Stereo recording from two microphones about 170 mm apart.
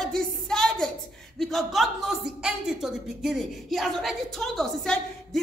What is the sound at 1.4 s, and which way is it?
Speech, centre (ahead or behind).